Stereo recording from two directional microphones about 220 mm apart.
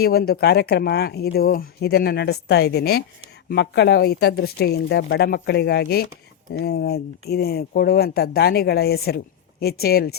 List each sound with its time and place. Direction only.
0.0 s speech: 45° left (ahead or behind)